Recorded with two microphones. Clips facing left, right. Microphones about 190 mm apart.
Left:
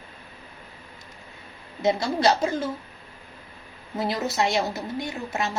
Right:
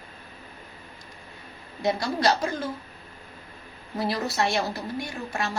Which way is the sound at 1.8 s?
25° left (ahead or behind).